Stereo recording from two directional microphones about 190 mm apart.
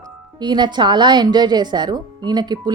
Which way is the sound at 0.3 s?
25° right (ahead or behind).